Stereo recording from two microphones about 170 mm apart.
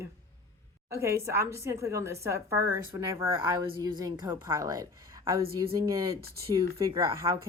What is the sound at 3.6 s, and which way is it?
A woman's voice, 25° right (ahead or behind).